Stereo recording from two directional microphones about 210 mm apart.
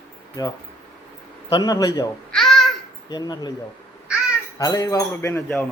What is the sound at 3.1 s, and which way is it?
Speech, 20° left (ahead or behind).